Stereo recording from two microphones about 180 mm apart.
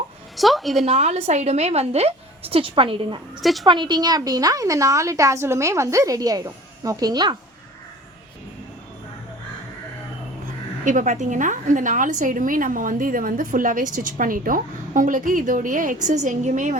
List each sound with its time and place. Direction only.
0.3 s a woman's voice: centre (ahead or behind)
0.9 s a woman's voice: 35° right (ahead or behind)
3.4 s speech: centre (ahead or behind)
3.7 s a woman's voice: 25° right (ahead or behind)
10.8 s a woman's voice: 45° right (ahead or behind)